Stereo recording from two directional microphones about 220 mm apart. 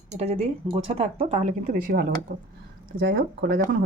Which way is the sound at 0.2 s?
25° right (ahead or behind).